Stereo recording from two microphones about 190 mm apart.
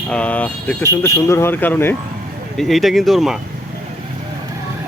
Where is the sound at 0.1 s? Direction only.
5° left (ahead or behind).